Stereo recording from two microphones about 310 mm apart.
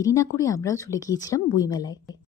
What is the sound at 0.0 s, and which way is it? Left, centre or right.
Speech, centre.